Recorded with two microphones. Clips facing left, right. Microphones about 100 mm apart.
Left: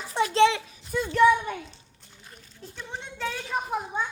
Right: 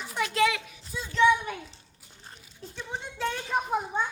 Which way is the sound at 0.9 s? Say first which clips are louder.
Left 9 dB; 60° left (ahead or behind).